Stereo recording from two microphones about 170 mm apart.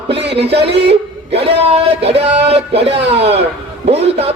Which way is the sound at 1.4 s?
35° right (ahead or behind).